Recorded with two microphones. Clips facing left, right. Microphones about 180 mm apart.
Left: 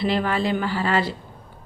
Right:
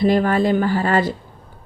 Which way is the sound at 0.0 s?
45° right (ahead or behind).